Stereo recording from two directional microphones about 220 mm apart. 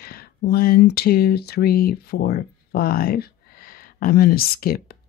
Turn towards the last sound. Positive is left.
turn(degrees=45)  # may be behind; listen again after turning